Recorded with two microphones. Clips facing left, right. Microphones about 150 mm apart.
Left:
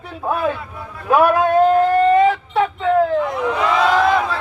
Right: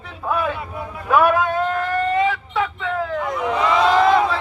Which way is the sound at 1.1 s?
35° left (ahead or behind).